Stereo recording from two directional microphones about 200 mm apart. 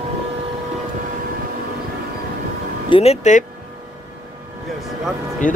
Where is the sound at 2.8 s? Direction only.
30° left (ahead or behind).